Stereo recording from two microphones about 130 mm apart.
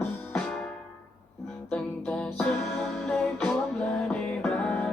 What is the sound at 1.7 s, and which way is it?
Music, 5° left (ahead or behind).